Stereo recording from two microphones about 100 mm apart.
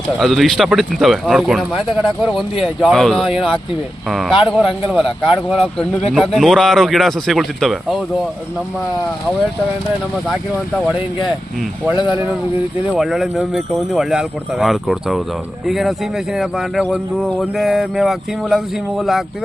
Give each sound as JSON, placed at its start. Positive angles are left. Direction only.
{"t": 0.2, "sound": "speech", "side_deg": 0}
{"t": 12.9, "sound": "speech", "side_deg": 0}